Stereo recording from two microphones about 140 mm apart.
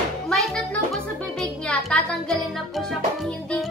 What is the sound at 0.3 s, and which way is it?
Music, 5° left (ahead or behind).